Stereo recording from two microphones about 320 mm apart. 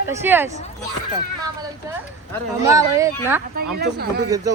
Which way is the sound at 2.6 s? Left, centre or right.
Centre.